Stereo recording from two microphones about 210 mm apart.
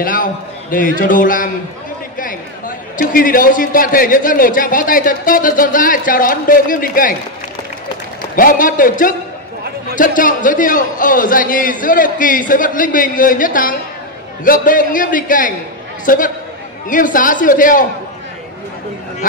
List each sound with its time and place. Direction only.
0.0 s a man's voice: 40° left (ahead or behind)
3.0 s a man's voice: 40° left (ahead or behind)
8.4 s a man's voice: 40° left (ahead or behind)